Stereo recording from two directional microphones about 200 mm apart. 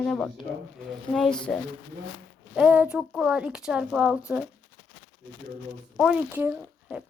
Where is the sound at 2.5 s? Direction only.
5° right (ahead or behind).